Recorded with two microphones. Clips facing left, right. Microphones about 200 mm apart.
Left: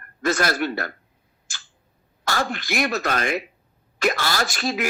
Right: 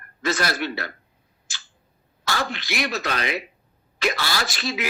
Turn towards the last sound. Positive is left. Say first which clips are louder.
# left 3 dB
turn(degrees=50)  # may be behind; listen again after turning